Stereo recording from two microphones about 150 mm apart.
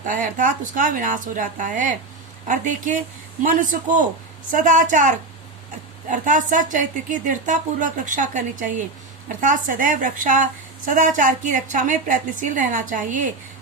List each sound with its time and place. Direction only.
0.0 s a woman's voice: 60° right (ahead or behind)